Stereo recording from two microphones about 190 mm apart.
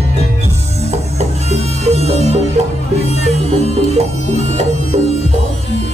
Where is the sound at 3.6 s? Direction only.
35° right (ahead or behind).